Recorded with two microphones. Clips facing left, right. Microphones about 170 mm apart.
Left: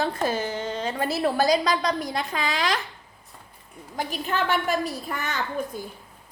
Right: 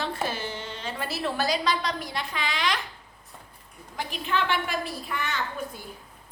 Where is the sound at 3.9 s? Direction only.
45° left (ahead or behind).